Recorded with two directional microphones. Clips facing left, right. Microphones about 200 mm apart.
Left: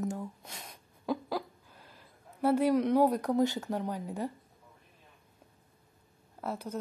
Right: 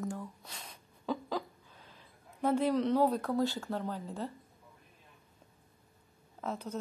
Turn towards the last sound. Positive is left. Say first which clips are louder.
# left 1 dB
turn(degrees=10)  # may be behind; listen again after turning